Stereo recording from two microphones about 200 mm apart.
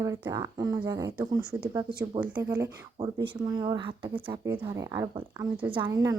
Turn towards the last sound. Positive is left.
turn(degrees=-15)  # may be behind; listen again after turning